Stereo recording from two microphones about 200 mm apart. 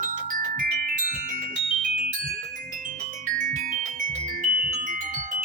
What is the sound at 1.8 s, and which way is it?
Music, 45° right (ahead or behind).